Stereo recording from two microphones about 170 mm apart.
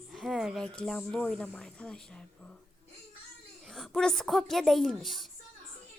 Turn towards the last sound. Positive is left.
turn(degrees=0)  # may be behind; listen again after turning